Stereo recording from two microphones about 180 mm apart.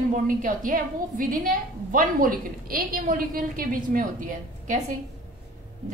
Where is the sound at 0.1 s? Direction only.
45° right (ahead or behind).